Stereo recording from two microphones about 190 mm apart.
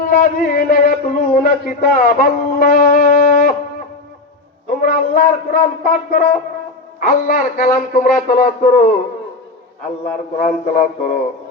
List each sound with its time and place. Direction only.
0.0 s a man's voice: 50° left (ahead or behind)
4.8 s a man's voice: 50° left (ahead or behind)
10.3 s a man's voice: 40° left (ahead or behind)